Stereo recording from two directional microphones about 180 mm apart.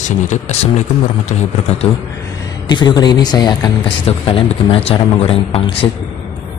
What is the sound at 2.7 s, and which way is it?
Speech, 25° left (ahead or behind).